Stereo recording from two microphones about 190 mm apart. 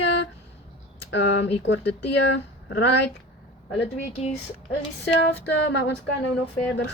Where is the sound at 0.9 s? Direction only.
70° left (ahead or behind).